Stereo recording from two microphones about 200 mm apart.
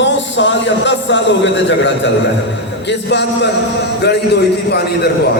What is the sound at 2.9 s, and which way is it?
Speech, 60° left (ahead or behind).